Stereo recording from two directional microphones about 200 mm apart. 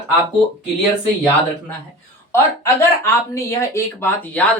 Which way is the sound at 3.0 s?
15° left (ahead or behind).